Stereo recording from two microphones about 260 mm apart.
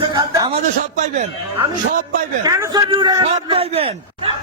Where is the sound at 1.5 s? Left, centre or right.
Centre.